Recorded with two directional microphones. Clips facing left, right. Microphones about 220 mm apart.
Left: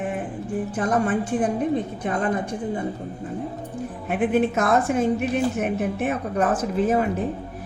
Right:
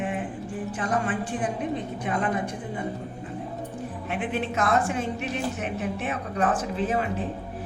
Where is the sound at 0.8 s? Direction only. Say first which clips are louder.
Left 5 dB; 45° left (ahead or behind).